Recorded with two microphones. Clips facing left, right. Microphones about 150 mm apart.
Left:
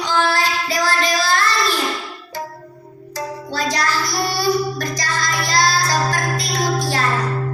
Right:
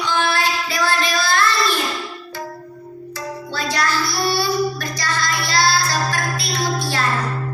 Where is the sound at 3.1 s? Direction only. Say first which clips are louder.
Left 3 dB; 40° left (ahead or behind).